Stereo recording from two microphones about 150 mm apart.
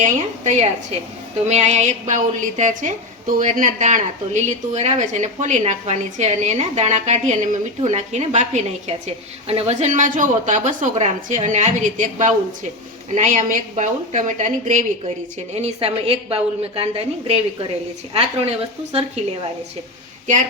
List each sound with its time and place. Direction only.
0.0 s a woman's voice: 50° right (ahead or behind)
15.5 s a woman's voice: 40° right (ahead or behind)